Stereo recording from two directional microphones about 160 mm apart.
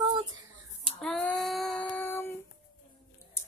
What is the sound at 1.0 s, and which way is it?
Child singing, centre (ahead or behind).